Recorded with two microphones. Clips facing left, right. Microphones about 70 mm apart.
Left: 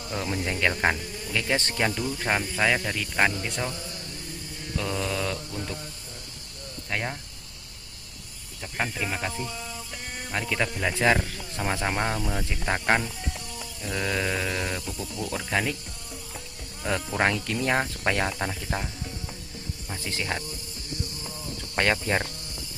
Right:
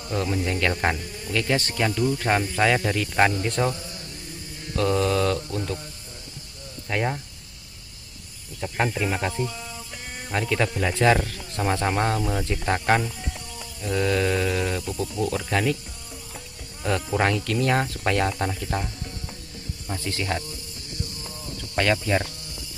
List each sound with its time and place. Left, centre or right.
0.0 s speech: centre
1.0 s insect: centre
1.3 s speech: centre
4.6 s mantra: centre
6.9 s speech: centre
8.6 s speech: centre
15.3 s speech: centre
17.4 s speech: left
18.0 s speech: centre
20.0 s speech: left
21.6 s snake: left
22.0 s speech: left